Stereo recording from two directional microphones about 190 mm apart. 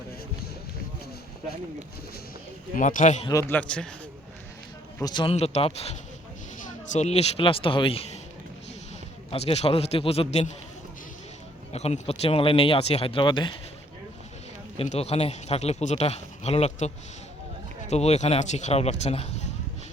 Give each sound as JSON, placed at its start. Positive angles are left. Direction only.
{"t": 2.7, "sound": "a man's voice", "side_deg": 45}
{"t": 3.2, "sound": "a man's voice", "side_deg": 15}
{"t": 3.6, "sound": "a man's voice", "side_deg": 5}
{"t": 4.9, "sound": "speech", "side_deg": 20}
{"t": 9.3, "sound": "speech", "side_deg": 30}
{"t": 11.7, "sound": "speech", "side_deg": 35}
{"t": 14.8, "sound": "speech", "side_deg": 35}